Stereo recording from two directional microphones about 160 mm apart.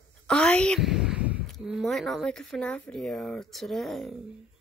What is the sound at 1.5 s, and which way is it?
Speech, centre (ahead or behind).